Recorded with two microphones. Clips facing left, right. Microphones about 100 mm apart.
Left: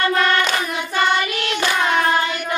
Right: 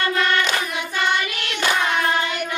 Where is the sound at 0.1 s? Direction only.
45° left (ahead or behind).